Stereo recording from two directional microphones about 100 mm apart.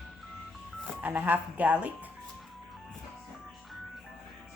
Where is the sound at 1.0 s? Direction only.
15° right (ahead or behind).